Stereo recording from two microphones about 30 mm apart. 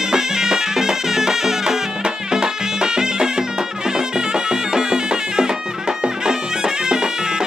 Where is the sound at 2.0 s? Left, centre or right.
Right.